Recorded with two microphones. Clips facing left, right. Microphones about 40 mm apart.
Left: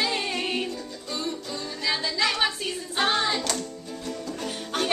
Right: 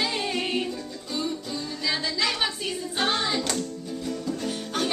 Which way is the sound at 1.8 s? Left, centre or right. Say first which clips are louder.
Left 2 dB; centre.